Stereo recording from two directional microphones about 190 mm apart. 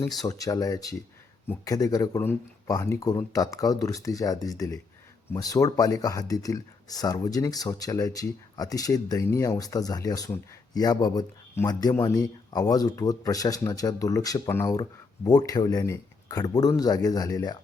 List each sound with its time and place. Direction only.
0.3 s speech: 20° left (ahead or behind)